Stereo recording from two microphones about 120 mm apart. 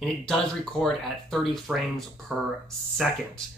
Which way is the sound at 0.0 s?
5° left (ahead or behind).